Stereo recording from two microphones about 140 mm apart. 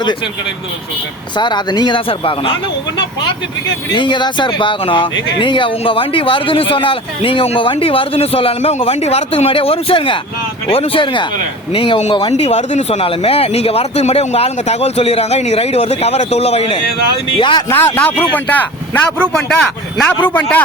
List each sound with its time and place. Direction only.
1.4 s speech: 30° left (ahead or behind)
3.9 s speech: 35° left (ahead or behind)
17.7 s a man's voice: 15° left (ahead or behind)